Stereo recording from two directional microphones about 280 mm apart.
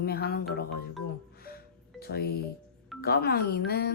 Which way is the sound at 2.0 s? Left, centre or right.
Left.